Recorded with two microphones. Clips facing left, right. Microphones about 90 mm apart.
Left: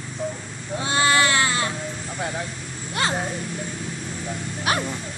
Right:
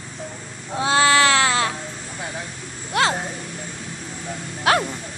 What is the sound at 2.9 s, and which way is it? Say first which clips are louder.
Speech: right 5 dB; 90° right.